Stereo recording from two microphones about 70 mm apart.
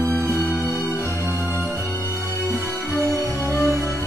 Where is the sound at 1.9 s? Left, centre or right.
Left.